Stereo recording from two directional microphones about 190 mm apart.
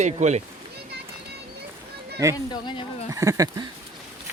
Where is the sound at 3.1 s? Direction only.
15° right (ahead or behind).